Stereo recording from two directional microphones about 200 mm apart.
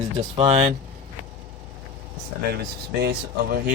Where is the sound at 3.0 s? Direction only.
50° right (ahead or behind).